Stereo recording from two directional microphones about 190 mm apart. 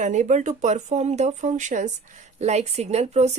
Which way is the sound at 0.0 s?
40° right (ahead or behind).